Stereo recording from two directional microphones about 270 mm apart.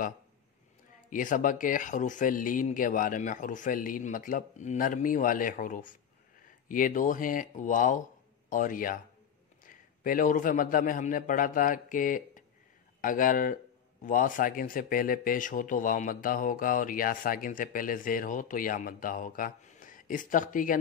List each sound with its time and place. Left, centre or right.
1.1 s a man's voice: left